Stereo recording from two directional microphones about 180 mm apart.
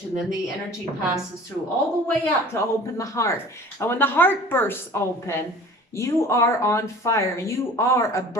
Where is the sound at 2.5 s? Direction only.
15° left (ahead or behind).